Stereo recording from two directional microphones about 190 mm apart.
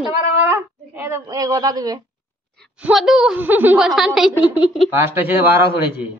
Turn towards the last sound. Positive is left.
turn(degrees=-10)  # may be behind; listen again after turning